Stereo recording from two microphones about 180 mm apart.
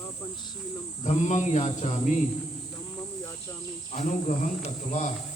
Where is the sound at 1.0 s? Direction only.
40° left (ahead or behind).